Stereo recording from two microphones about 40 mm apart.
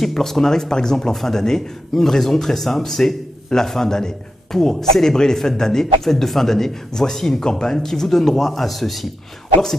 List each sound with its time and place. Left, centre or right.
0.0 s speech: centre